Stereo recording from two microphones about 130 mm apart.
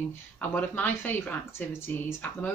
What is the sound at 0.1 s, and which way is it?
Speech, 15° left (ahead or behind).